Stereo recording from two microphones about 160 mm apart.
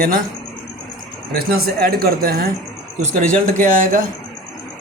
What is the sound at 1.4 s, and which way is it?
Speech, 75° right (ahead or behind).